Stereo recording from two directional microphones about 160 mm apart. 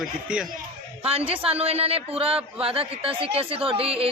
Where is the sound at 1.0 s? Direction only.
35° right (ahead or behind).